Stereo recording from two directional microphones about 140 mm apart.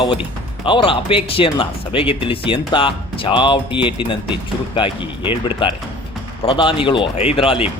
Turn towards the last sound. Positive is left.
turn(degrees=40)  # may be behind; listen again after turning